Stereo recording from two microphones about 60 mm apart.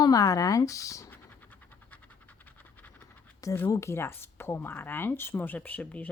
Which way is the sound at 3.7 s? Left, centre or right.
Left.